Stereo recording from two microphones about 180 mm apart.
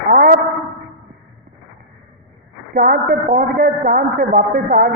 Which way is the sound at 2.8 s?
50° right (ahead or behind).